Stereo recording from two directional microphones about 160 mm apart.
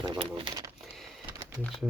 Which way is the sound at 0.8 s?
Centre (ahead or behind).